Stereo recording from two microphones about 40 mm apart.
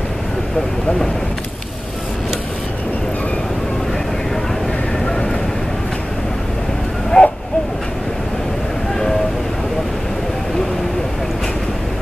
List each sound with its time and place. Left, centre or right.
7.1 s owl: centre